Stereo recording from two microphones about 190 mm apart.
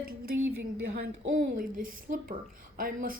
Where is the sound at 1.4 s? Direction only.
45° right (ahead or behind).